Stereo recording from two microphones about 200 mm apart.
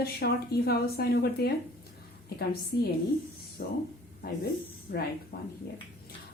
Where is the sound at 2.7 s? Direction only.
55° left (ahead or behind).